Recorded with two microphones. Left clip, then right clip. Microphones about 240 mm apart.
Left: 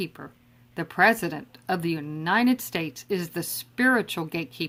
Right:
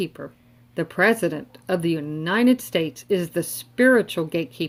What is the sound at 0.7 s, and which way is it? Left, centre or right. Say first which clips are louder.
Speech: right 1 dB; centre.